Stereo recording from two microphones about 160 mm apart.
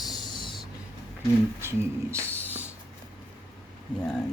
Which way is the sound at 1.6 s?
15° right (ahead or behind).